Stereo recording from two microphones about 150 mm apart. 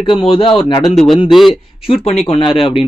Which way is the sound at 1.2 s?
Centre (ahead or behind).